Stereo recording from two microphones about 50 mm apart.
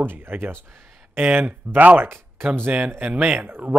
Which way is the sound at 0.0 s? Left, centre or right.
Right.